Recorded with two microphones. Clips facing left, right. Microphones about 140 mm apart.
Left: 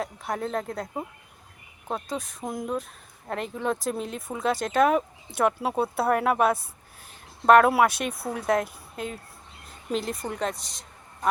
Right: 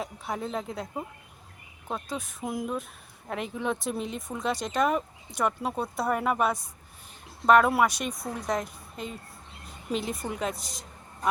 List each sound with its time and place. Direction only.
0.0 s speech: 5° right (ahead or behind)
2.0 s speech: centre (ahead or behind)
5.3 s speech: 60° left (ahead or behind)
5.5 s speech: 5° left (ahead or behind)
7.6 s a woman's voice: centre (ahead or behind)